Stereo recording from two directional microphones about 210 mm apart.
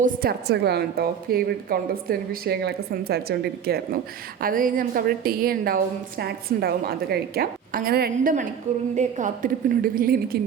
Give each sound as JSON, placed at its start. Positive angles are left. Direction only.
{"t": 0.0, "sound": "a woman's voice", "side_deg": -45}